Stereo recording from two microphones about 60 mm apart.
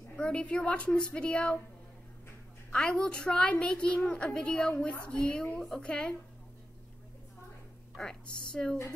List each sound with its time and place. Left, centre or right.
0.1 s a woman's voice: centre
2.7 s a woman's voice: centre
8.3 s a woman's voice: centre